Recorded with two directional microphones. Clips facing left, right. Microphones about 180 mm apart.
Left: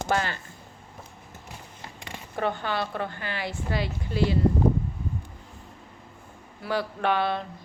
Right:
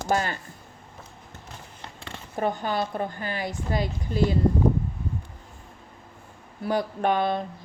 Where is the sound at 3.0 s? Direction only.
45° right (ahead or behind).